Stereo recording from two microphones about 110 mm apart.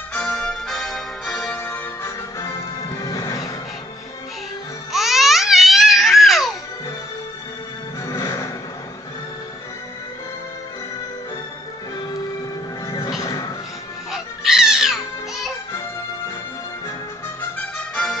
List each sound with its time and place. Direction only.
0.1 s music: 10° left (ahead or behind)
2.0 s music: 30° left (ahead or behind)
4.9 s babbling: centre (ahead or behind)
8.1 s music: 25° left (ahead or behind)
12.8 s music: 35° left (ahead or behind)
14.1 s cat: 5° right (ahead or behind)
17.4 s music: 10° left (ahead or behind)